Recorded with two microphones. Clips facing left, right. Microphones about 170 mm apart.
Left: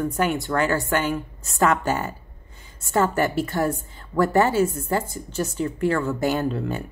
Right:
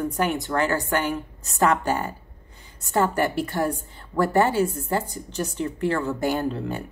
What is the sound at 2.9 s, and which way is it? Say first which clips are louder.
A woman's voice: left 1 dB; 15° right (ahead or behind).